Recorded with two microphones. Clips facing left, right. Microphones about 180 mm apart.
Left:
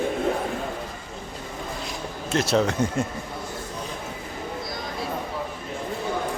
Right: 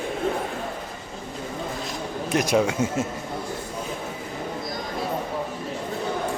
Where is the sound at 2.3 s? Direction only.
15° right (ahead or behind).